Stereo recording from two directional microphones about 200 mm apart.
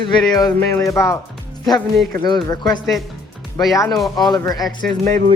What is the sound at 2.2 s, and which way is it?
Speech, 20° left (ahead or behind).